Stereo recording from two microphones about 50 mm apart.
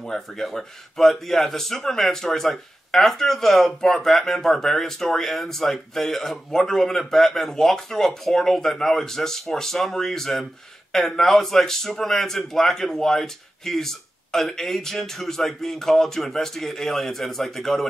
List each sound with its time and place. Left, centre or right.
0.0 s a man's voice: centre